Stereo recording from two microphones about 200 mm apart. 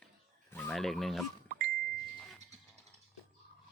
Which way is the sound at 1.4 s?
50° right (ahead or behind).